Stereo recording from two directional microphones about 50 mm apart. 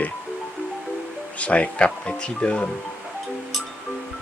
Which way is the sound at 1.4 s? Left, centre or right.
Left.